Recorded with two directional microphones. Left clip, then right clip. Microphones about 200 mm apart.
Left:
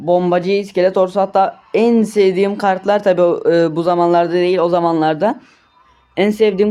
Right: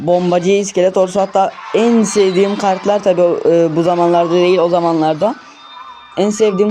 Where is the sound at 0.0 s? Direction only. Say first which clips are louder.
Right 1 dB; 15° right (ahead or behind).